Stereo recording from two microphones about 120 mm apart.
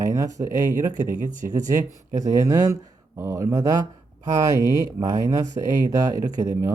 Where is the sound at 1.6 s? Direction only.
30° right (ahead or behind).